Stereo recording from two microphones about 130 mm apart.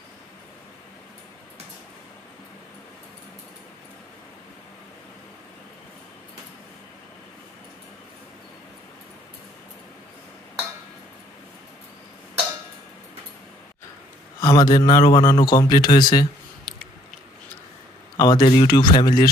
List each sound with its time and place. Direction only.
14.4 s a man's voice: 35° left (ahead or behind)
16.7 s chewing: centre (ahead or behind)
18.1 s a sound: 30° left (ahead or behind)
18.4 s a man's voice: 35° left (ahead or behind)